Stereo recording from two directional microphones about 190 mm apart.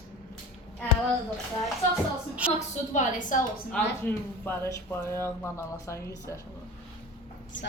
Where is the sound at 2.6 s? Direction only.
40° left (ahead or behind).